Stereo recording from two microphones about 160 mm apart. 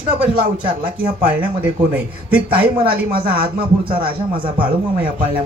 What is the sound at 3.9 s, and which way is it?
Speech, 35° right (ahead or behind).